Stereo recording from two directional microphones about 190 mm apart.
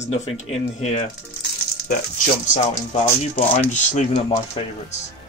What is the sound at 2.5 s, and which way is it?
Speech, 35° left (ahead or behind).